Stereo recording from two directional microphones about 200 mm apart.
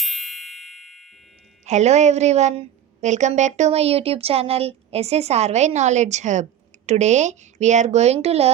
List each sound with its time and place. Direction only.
0.0 s music: centre (ahead or behind)
1.6 s a woman's voice: 35° right (ahead or behind)